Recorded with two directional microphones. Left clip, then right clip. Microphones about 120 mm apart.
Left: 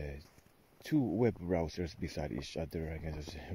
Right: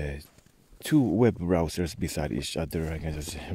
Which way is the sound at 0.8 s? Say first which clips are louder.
Right 9 dB; 30° right (ahead or behind).